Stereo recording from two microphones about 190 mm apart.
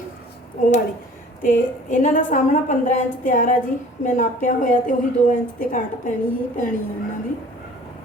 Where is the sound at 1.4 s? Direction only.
45° left (ahead or behind).